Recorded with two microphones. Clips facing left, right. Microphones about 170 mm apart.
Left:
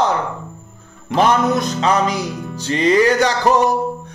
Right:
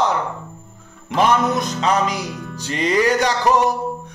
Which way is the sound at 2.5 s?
25° left (ahead or behind).